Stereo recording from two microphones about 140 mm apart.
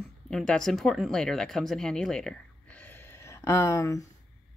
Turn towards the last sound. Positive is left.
turn(degrees=20)  # may be behind; listen again after turning